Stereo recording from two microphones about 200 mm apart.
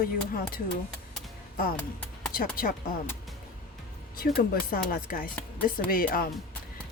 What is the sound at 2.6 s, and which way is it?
Speech, 45° left (ahead or behind).